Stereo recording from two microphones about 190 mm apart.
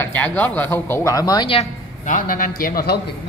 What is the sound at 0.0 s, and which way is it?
Speech, 10° left (ahead or behind).